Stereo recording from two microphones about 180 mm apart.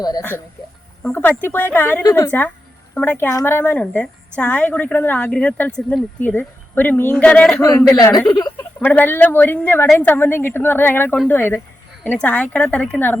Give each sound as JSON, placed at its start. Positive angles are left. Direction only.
{"t": 0.0, "sound": "speech", "side_deg": 20}
{"t": 1.5, "sound": "a woman's voice", "side_deg": 10}
{"t": 7.6, "sound": "a woman's voice", "side_deg": 20}
{"t": 8.8, "sound": "a woman's voice", "side_deg": 10}